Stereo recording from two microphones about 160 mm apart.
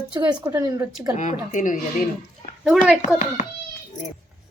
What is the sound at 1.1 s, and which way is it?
Speech, 50° left (ahead or behind).